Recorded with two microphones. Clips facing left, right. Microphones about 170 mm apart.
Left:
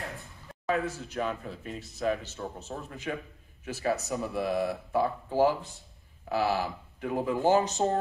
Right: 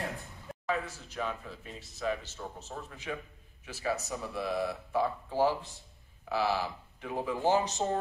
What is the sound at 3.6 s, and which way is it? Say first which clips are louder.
Speech: left 4 dB; 45° left (ahead or behind).